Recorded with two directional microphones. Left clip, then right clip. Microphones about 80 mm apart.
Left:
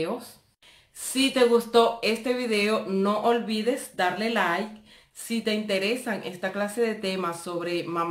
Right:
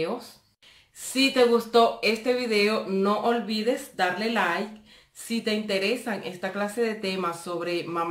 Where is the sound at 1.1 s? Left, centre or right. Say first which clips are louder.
Even; left.